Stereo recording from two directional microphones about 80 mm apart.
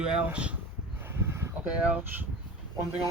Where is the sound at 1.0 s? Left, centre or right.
Right.